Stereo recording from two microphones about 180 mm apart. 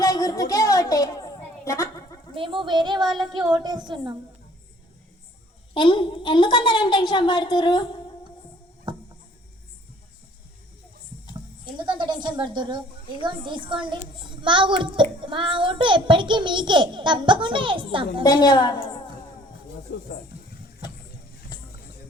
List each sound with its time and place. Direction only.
0.0 s a sound: 20° left (ahead or behind)
2.3 s a child's voice: 30° right (ahead or behind)
5.7 s a woman's voice: 25° left (ahead or behind)
8.9 s a sound: 25° right (ahead or behind)
11.6 s a child's voice: 25° right (ahead or behind)
18.2 s a woman's voice: 20° left (ahead or behind)
19.9 s speech: 75° left (ahead or behind)